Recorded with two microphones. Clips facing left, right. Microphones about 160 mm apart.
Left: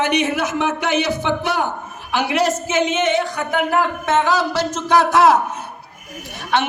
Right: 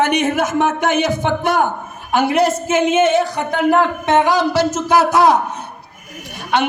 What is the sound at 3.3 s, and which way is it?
A woman's voice, 20° right (ahead or behind).